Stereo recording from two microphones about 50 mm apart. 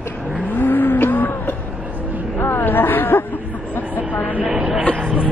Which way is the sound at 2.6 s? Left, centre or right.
Left.